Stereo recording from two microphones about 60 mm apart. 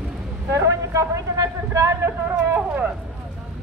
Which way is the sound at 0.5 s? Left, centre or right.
Right.